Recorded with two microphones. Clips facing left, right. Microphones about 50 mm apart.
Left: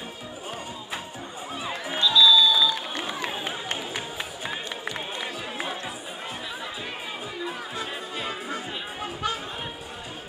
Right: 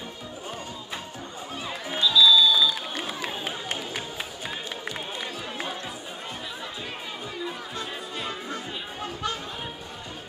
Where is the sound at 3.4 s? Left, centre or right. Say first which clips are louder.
Left 1 dB; centre.